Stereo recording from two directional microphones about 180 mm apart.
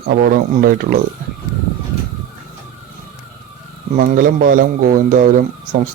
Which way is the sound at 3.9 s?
50° right (ahead or behind).